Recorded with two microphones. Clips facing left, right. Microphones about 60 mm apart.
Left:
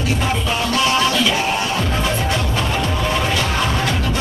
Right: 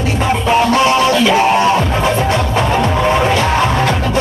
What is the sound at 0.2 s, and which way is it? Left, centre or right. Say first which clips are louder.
Music: right 8 dB; right.